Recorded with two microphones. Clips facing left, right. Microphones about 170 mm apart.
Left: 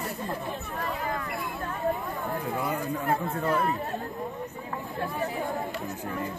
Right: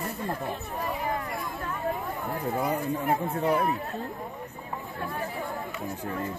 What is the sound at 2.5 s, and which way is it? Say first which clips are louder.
Speech: right 4 dB; 20° right (ahead or behind).